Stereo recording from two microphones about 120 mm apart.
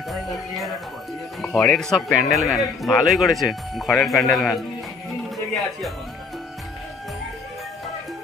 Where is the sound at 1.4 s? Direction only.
5° left (ahead or behind).